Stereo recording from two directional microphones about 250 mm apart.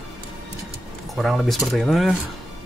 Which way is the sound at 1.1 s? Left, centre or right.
Centre.